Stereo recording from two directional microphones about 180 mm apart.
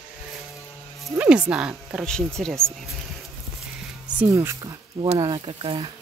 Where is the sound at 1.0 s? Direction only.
5° right (ahead or behind).